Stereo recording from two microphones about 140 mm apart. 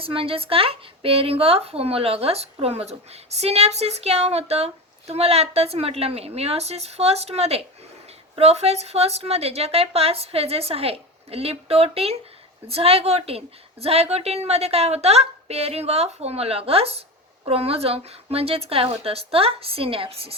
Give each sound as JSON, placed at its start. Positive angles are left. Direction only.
{"t": 0.0, "sound": "speech", "side_deg": -40}